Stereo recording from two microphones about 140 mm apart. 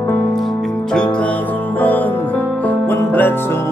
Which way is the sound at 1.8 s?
10° left (ahead or behind).